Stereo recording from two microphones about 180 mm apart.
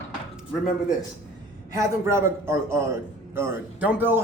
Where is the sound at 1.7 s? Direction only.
15° right (ahead or behind).